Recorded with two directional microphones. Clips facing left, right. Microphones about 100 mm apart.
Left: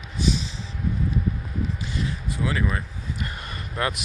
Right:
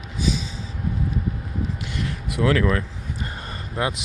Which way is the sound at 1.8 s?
70° right (ahead or behind).